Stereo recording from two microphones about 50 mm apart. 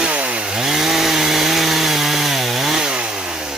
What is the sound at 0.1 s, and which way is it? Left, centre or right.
Chainsaw, right.